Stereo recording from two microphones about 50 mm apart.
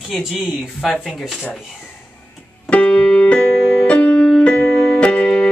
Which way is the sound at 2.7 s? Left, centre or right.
Left.